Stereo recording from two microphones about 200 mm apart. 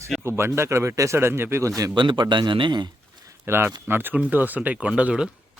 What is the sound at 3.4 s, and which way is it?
Speech, 10° right (ahead or behind).